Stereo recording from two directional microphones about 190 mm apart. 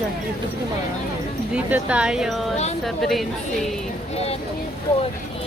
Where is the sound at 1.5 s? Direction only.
5° right (ahead or behind).